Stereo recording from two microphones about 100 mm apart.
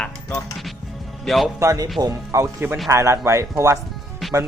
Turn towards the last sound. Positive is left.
turn(degrees=0)  # may be behind; listen again after turning